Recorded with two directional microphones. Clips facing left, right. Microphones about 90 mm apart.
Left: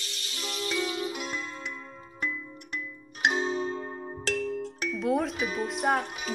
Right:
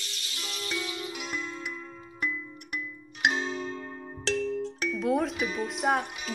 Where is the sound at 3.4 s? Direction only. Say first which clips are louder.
Left 4 dB; 35° left (ahead or behind).